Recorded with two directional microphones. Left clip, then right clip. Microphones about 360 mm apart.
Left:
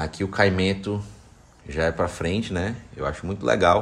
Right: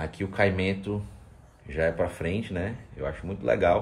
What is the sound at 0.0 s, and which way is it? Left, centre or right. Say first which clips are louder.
Speech: left 4 dB; centre.